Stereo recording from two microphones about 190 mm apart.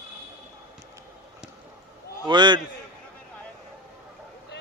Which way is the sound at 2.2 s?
25° right (ahead or behind).